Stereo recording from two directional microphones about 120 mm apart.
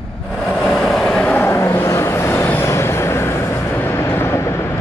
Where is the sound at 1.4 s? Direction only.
20° left (ahead or behind).